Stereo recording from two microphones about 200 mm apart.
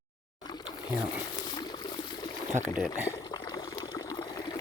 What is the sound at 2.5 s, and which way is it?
Speech, 10° right (ahead or behind).